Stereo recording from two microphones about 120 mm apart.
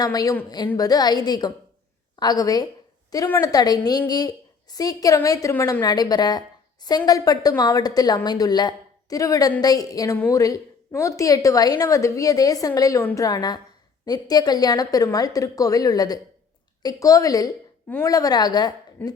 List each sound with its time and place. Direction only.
0.0 s a woman's voice: 30° left (ahead or behind)
5.8 s a woman's voice: 35° left (ahead or behind)